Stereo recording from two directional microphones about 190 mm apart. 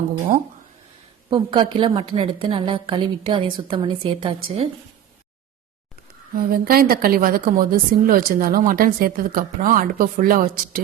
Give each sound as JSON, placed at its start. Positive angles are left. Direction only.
{"t": 1.3, "sound": "a woman's voice", "side_deg": -25}
{"t": 6.3, "sound": "a woman's voice", "side_deg": -50}